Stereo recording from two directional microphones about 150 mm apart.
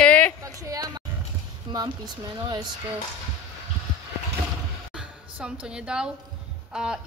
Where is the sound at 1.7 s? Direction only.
30° right (ahead or behind).